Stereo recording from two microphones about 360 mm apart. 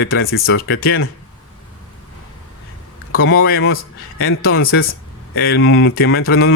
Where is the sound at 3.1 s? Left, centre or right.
Left.